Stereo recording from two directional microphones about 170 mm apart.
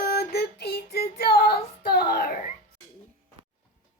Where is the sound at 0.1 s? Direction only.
75° left (ahead or behind).